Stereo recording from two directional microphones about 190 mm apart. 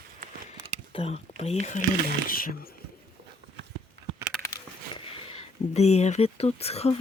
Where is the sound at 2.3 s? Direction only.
50° left (ahead or behind).